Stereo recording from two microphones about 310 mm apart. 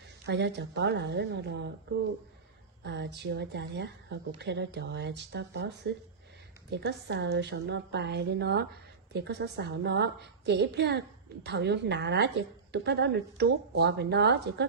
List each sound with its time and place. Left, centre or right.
0.3 s speech: right
2.8 s speech: right